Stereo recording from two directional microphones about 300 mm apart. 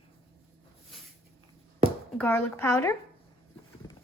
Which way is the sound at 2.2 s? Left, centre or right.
Centre.